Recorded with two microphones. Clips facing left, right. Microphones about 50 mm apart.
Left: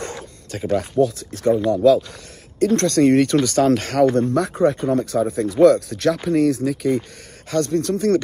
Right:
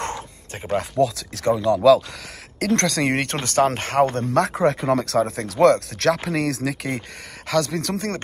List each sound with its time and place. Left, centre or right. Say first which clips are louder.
0.0 s bow-wow: right 2 dB; right
0.9 s speech: left 2 dB; right
1.7 s speech: right 3 dB; right
4.3 s speech: left 1 dB; right
7.5 s speech: left 2 dB; right
7.9 s speech: left 9 dB; right